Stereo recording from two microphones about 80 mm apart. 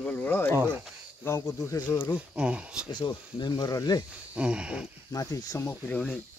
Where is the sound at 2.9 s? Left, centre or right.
Left.